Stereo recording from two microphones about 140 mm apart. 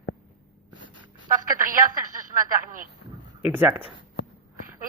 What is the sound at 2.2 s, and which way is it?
Speech, 75° right (ahead or behind).